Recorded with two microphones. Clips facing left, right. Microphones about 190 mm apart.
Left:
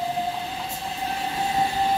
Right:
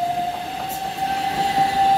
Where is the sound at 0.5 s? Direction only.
65° right (ahead or behind).